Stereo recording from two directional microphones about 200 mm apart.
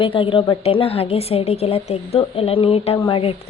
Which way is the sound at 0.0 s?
25° left (ahead or behind).